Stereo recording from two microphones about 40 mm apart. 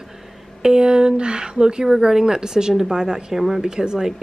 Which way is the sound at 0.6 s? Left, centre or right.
Centre.